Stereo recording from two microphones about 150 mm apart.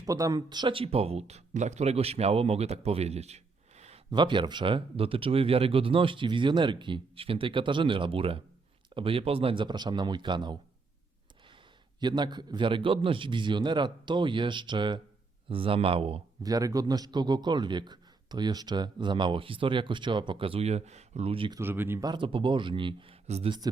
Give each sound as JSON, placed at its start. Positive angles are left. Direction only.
{"t": 0.0, "sound": "speech", "side_deg": -25}
{"t": 4.1, "sound": "a man's voice", "side_deg": -30}
{"t": 11.9, "sound": "a man's voice", "side_deg": -30}
{"t": 16.4, "sound": "a man's voice", "side_deg": -25}
{"t": 21.6, "sound": "speech", "side_deg": -15}
{"t": 22.0, "sound": "a man's voice", "side_deg": -30}